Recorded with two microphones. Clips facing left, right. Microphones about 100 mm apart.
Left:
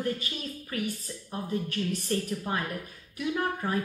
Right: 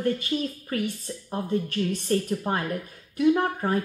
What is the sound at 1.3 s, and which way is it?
Speech, 35° right (ahead or behind).